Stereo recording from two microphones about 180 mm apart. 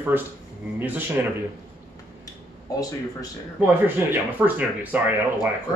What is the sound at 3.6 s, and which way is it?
Speech, 10° right (ahead or behind).